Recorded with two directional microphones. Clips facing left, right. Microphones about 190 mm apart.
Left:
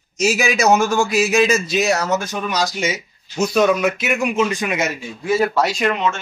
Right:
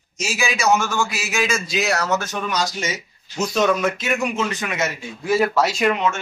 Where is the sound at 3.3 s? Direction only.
10° left (ahead or behind).